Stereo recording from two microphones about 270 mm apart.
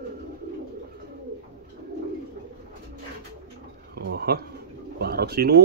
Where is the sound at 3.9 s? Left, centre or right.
Right.